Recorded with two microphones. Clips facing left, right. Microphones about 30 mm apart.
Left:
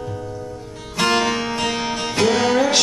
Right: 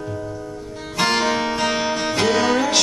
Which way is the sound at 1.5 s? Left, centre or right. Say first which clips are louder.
Right 2 dB; right.